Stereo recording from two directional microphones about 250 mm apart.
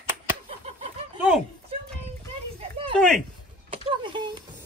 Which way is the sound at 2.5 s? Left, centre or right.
Right.